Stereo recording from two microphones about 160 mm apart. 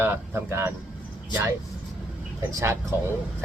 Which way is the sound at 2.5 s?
15° right (ahead or behind).